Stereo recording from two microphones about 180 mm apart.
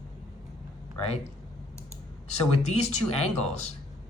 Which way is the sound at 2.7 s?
40° left (ahead or behind).